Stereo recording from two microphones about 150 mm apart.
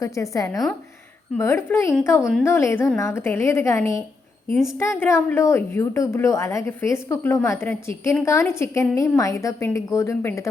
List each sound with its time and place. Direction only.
0.0 s a woman's voice: 20° left (ahead or behind)
4.5 s a woman's voice: centre (ahead or behind)
4.8 s a woman's voice: 15° left (ahead or behind)